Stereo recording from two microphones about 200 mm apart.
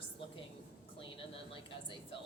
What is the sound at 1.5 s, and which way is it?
Speech, 25° left (ahead or behind).